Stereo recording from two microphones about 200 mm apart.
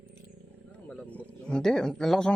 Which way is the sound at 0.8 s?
5° left (ahead or behind).